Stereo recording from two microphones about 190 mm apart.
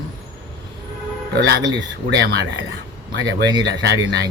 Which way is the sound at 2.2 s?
70° right (ahead or behind).